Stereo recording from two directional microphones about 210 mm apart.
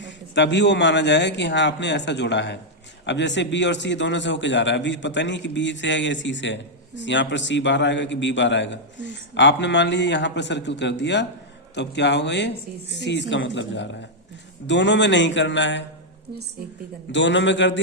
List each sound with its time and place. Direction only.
0.0 s a man's voice: 60° left (ahead or behind)
17.1 s a man's voice: 60° left (ahead or behind)